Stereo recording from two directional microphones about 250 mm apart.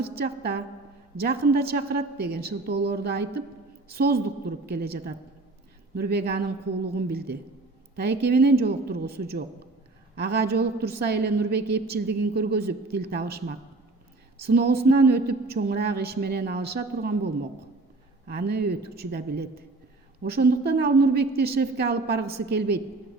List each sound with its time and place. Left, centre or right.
0.0 s a woman's voice: right
18.3 s a woman's voice: right